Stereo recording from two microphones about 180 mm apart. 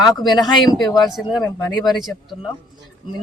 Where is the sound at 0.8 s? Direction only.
20° left (ahead or behind).